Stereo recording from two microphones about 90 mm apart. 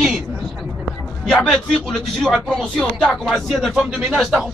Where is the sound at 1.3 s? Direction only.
5° left (ahead or behind).